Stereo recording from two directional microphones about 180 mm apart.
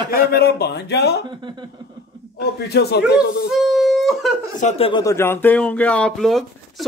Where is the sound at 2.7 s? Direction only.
65° left (ahead or behind).